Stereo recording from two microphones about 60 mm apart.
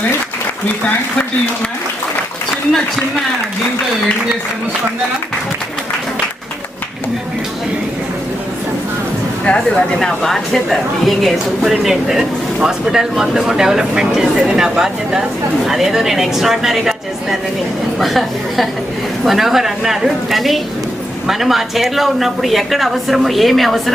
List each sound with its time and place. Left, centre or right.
9.4 s speech: centre
9.6 s a woman's voice: centre